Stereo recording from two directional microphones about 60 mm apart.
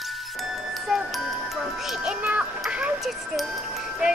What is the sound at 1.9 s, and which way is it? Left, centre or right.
Music, centre.